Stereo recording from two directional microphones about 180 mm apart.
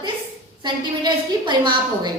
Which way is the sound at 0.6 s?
25° right (ahead or behind).